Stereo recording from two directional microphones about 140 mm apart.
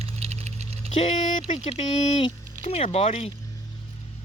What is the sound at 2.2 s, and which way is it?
Speech, 40° left (ahead or behind).